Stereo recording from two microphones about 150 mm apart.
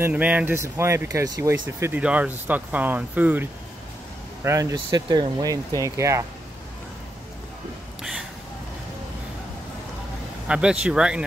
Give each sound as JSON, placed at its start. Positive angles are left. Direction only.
{"t": 0.0, "sound": "speech", "side_deg": -10}
{"t": 8.0, "sound": "a sound", "side_deg": -5}
{"t": 10.5, "sound": "speech", "side_deg": -5}